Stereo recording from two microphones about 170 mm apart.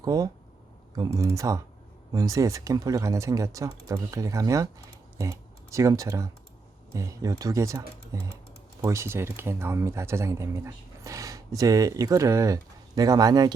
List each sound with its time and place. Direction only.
0.0 s speech: 20° right (ahead or behind)